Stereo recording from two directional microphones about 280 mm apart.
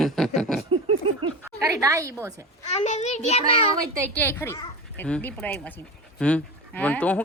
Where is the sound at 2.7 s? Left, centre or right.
Left.